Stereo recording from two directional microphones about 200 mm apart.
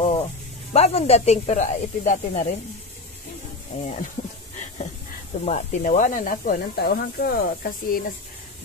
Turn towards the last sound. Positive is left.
turn(degrees=45)  # may be behind; listen again after turning